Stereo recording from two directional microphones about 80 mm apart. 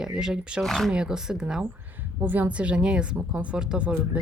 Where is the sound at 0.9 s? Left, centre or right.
Centre.